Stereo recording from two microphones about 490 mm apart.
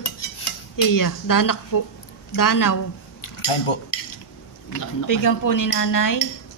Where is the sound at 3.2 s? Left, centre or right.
Left.